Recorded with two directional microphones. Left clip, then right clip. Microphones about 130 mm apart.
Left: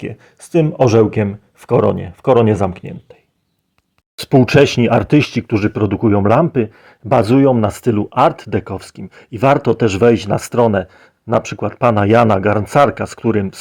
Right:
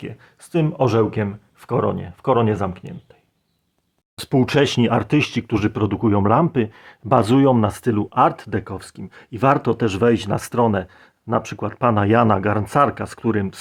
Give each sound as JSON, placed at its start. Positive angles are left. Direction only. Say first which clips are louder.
{"t": 0.0, "sound": "speech", "louder": "left 7 dB", "side_deg": 30}
{"t": 4.2, "sound": "speech", "louder": "left 7 dB", "side_deg": 20}
{"t": 7.7, "sound": "speech", "louder": "left 5 dB", "side_deg": 15}